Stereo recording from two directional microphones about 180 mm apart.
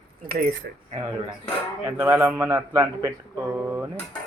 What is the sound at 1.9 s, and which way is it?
Speech, 15° right (ahead or behind).